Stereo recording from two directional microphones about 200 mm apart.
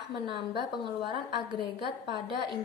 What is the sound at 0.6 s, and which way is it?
A woman's voice, 25° right (ahead or behind).